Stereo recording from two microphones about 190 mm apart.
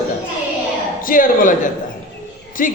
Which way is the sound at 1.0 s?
45° left (ahead or behind).